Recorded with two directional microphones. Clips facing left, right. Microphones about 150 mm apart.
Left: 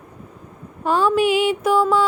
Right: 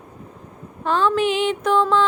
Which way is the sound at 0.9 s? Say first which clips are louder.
Left 2 dB; 10° left (ahead or behind).